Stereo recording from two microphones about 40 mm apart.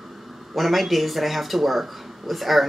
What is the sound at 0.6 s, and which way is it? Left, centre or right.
Speech, centre.